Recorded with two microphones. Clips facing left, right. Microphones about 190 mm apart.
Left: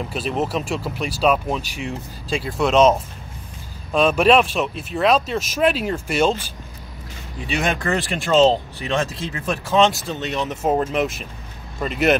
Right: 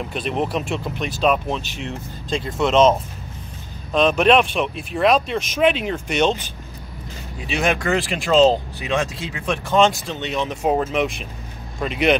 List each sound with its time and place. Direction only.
0.1 s speech: 5° left (ahead or behind)
3.9 s speech: 5° left (ahead or behind)
7.5 s speech: centre (ahead or behind)